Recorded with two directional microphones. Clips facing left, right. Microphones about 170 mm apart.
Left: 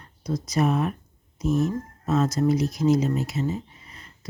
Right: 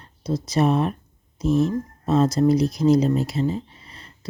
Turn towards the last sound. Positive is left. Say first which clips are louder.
# right 4 dB
turn(degrees=-30)  # may be behind; listen again after turning